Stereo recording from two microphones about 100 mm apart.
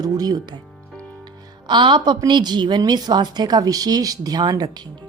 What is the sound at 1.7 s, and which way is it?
A woman's voice, 50° right (ahead or behind).